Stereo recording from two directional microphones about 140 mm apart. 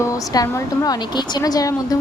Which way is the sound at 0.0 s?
20° left (ahead or behind).